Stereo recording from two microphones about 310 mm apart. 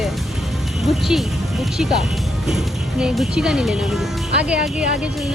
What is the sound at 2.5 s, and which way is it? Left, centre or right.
Speech, centre.